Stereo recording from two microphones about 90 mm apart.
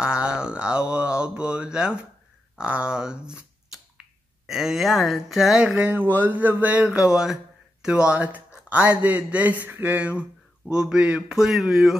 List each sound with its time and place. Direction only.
0.0 s mantra: 10° right (ahead or behind)
2.5 s a man's voice: 15° right (ahead or behind)
4.5 s speech: 5° right (ahead or behind)
5.9 s a sound: 20° right (ahead or behind)
7.8 s a man's voice: 10° right (ahead or behind)
8.6 s a sound: 15° right (ahead or behind)
9.7 s a man's voice: 20° right (ahead or behind); by 12.0 s 5° right (ahead or behind)